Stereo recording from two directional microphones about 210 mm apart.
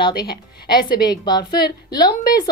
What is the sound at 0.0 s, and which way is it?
A woman's voice, 20° left (ahead or behind).